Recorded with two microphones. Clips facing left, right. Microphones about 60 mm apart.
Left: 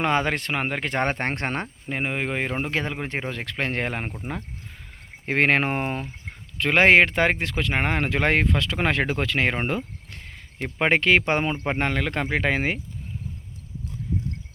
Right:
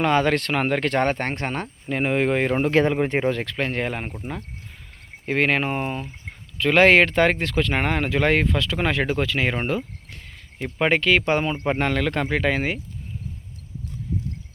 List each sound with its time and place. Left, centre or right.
0.0 s speech: left
1.0 s speech: left
1.6 s speech: centre
2.0 s speech: centre
3.4 s speech: left
6.6 s speech: left
9.6 s cricket: left
10.8 s speech: left
11.4 s speech: centre